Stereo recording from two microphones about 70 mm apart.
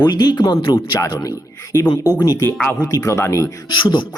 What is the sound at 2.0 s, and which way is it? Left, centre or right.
Speech, left.